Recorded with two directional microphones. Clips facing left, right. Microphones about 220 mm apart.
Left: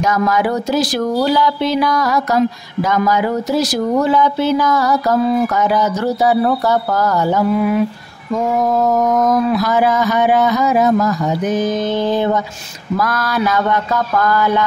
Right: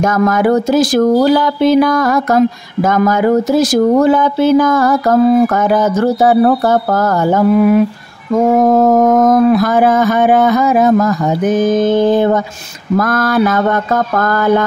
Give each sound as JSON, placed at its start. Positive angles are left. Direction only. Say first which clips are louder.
{"t": 0.0, "sound": "speech", "louder": "right 4 dB", "side_deg": -50}